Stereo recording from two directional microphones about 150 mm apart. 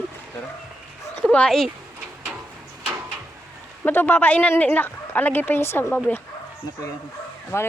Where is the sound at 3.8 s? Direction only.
10° left (ahead or behind).